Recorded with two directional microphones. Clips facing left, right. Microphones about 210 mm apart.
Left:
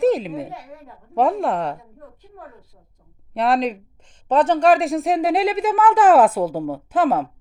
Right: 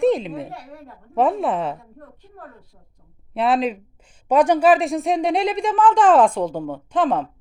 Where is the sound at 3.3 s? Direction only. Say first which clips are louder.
Even; centre (ahead or behind).